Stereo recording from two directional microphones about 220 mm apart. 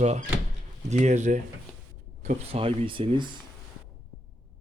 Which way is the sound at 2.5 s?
25° right (ahead or behind).